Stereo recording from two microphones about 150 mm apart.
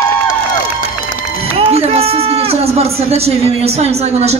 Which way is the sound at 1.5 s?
40° right (ahead or behind).